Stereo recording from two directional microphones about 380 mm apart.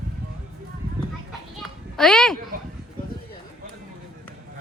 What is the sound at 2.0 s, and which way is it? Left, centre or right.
Speech, centre.